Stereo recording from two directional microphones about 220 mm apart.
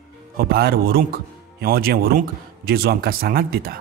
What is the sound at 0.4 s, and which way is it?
A man's voice, 45° right (ahead or behind).